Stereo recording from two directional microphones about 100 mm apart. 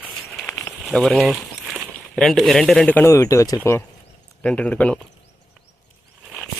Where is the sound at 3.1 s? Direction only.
30° left (ahead or behind).